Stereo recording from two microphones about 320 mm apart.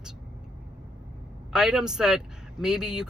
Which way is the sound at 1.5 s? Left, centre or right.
Centre.